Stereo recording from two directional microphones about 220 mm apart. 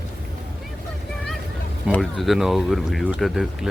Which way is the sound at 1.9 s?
Centre (ahead or behind).